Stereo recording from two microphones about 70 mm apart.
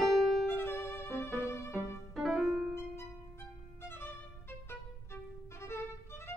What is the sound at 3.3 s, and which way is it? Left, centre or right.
Music, left.